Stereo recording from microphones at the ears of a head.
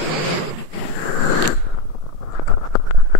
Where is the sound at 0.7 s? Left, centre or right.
Left.